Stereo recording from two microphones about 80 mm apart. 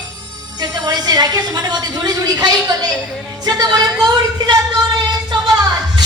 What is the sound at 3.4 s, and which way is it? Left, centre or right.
Speech, right.